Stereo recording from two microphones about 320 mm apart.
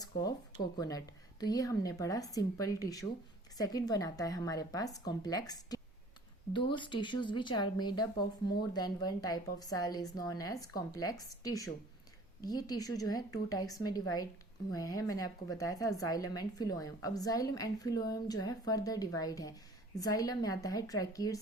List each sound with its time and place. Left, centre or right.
0.2 s speech: centre